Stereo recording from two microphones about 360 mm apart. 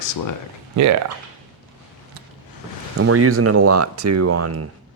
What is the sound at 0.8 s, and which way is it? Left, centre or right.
Speech, right.